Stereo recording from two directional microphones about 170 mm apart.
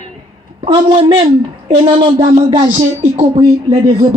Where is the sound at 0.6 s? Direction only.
30° right (ahead or behind).